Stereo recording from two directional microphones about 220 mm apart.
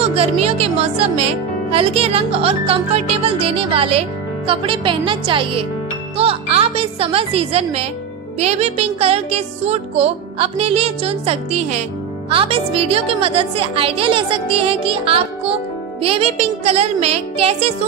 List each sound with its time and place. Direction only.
0.0 s speech: 25° right (ahead or behind)